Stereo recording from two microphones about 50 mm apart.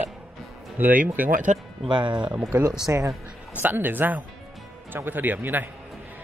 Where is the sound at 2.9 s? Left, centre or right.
Right.